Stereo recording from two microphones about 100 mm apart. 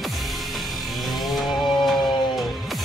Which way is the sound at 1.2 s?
Centre (ahead or behind).